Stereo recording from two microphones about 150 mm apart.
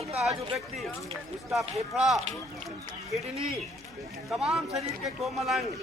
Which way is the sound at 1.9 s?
Centre (ahead or behind).